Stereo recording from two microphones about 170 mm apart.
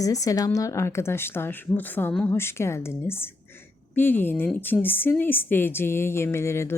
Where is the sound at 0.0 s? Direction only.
20° left (ahead or behind).